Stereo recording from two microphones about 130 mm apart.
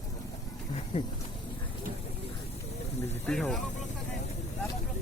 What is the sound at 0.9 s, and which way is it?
Insect, 45° left (ahead or behind).